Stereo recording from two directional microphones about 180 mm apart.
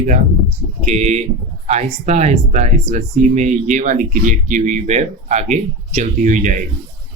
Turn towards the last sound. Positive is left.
turn(degrees=-45)  # may be behind; listen again after turning